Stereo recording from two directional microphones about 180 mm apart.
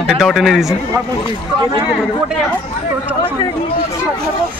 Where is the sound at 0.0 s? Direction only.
Centre (ahead or behind).